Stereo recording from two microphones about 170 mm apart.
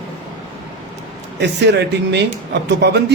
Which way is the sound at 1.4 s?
90° right.